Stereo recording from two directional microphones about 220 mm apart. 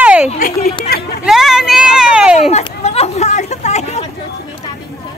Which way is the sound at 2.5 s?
30° left (ahead or behind).